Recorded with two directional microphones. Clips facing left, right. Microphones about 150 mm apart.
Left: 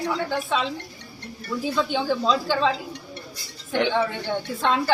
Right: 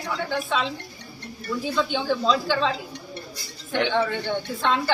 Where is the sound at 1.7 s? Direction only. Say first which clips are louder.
Left 1 dB; 5° left (ahead or behind).